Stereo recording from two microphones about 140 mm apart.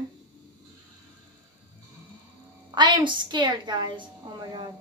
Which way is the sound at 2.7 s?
35° right (ahead or behind).